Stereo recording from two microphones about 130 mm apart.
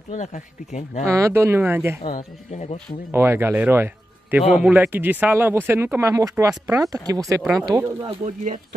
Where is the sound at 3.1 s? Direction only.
20° right (ahead or behind).